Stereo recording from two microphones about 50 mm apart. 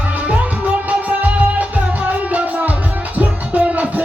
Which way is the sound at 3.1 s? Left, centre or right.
Right.